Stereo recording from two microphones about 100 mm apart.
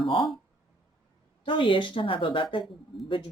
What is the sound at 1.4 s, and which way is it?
Speech, 55° left (ahead or behind).